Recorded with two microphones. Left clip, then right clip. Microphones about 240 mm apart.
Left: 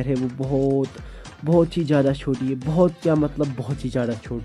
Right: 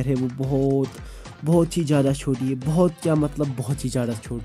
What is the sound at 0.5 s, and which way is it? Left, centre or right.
Speech, right.